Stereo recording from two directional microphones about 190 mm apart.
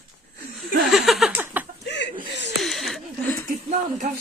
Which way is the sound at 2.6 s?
Centre (ahead or behind).